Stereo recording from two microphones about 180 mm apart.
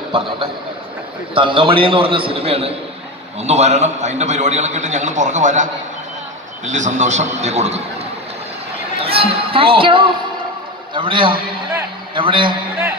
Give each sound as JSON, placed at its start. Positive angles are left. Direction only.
{"t": 1.3, "sound": "a man's voice", "side_deg": -30}
{"t": 9.0, "sound": "a man's voice", "side_deg": -30}